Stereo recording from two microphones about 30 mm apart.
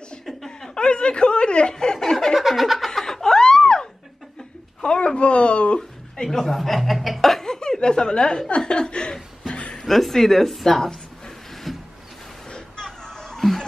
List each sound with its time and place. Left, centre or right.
0.3 s chuckle: centre
0.7 s speech: left
1.7 s speech: left
2.3 s a sound: centre
2.9 s snicker: centre
4.8 s speech: left
5.8 s a sound: centre
6.4 s speech: centre
7.4 s chuckle: centre
8.5 s speech: left
9.8 s speech: centre
11.7 s a sound: centre
12.4 s a sound: left